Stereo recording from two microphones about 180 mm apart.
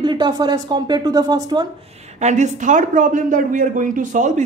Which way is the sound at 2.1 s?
40° right (ahead or behind).